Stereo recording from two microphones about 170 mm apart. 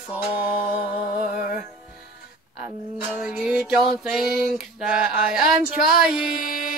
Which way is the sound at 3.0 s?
5° right (ahead or behind).